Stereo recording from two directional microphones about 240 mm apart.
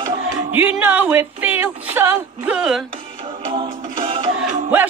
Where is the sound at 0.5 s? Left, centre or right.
Centre.